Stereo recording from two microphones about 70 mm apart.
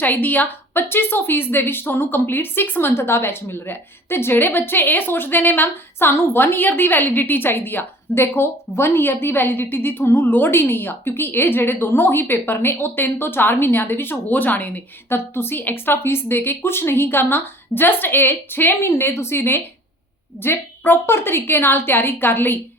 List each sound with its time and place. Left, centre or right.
0.0 s a woman's voice: left